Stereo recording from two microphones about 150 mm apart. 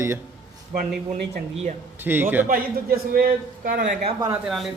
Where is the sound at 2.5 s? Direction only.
80° right; by 4.0 s 65° right (ahead or behind).